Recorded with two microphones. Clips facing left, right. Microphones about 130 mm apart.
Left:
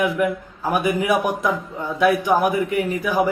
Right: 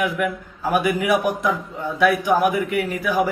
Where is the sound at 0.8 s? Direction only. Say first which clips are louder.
Left 2 dB; 20° left (ahead or behind).